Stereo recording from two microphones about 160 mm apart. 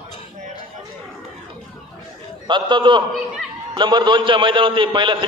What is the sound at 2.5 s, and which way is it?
A man's voice, 30° right (ahead or behind).